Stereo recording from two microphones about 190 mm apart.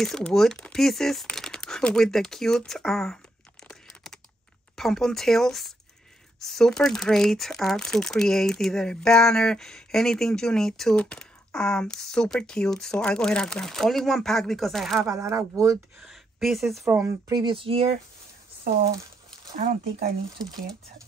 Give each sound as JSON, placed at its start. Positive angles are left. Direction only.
{"t": 0.0, "sound": "speech", "side_deg": 0}
{"t": 3.6, "sound": "a sound", "side_deg": 5}
{"t": 4.7, "sound": "speech", "side_deg": 0}
{"t": 15.0, "sound": "speech", "side_deg": -15}
{"t": 16.0, "sound": "speech", "side_deg": 0}
{"t": 16.8, "sound": "speech", "side_deg": -15}
{"t": 19.5, "sound": "speech", "side_deg": -45}